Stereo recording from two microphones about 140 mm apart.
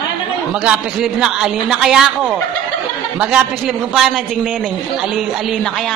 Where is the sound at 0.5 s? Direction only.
5° right (ahead or behind).